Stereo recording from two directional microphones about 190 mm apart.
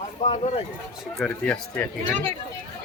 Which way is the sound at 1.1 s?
5° left (ahead or behind).